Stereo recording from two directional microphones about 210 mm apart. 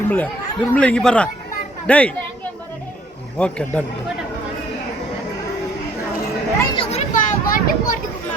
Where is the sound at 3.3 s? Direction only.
5° left (ahead or behind).